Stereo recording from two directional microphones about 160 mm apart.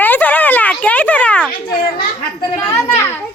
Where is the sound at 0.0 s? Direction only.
10° left (ahead or behind).